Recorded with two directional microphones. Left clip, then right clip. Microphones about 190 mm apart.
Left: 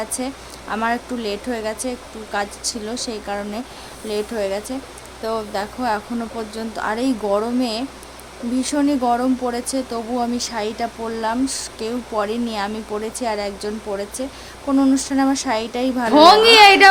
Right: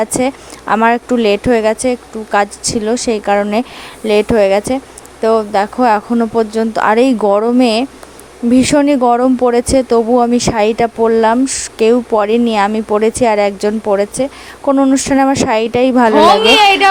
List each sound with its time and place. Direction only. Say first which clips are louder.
0.0 s speech: right 12 dB; 45° right (ahead or behind)
14.7 s speech: right 7 dB; 35° right (ahead or behind)
16.1 s a woman's voice: left 1 dB; 10° left (ahead or behind)